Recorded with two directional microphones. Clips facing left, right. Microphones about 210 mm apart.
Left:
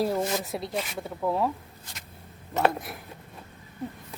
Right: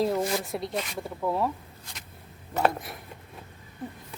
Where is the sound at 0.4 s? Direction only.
Centre (ahead or behind).